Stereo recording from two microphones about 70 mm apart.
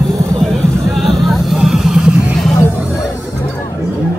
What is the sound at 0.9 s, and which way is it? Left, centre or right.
Vehicle, centre.